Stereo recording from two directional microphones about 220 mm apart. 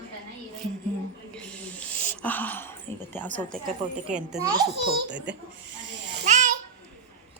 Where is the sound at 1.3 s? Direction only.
5° left (ahead or behind).